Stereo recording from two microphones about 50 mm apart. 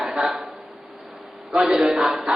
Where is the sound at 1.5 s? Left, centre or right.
Centre.